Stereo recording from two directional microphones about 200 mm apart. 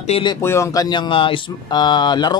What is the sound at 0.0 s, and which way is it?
Speech, 25° left (ahead or behind).